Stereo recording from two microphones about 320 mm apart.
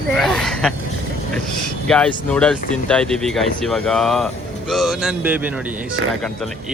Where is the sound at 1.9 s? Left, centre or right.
Centre.